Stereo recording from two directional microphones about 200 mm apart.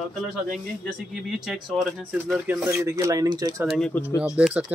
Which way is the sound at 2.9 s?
15° right (ahead or behind).